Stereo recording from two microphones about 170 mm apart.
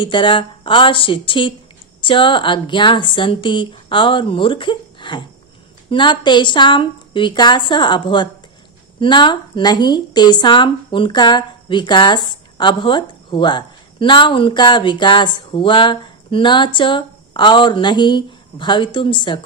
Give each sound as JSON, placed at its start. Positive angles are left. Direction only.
{"t": 0.0, "sound": "a woman's voice", "side_deg": 30}